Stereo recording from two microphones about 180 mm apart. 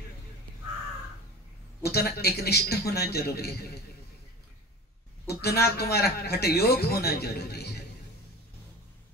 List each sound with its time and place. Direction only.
1.8 s a man's voice: 60° left (ahead or behind)
5.4 s a man's voice: 60° left (ahead or behind)